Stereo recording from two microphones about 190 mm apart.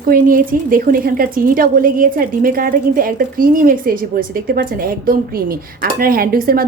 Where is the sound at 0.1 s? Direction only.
45° right (ahead or behind).